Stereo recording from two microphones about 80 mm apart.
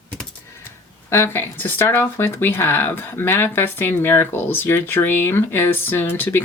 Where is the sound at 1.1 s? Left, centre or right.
Left.